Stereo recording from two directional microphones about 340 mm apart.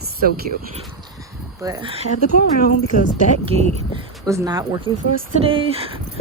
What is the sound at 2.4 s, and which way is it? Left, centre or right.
Speech, left.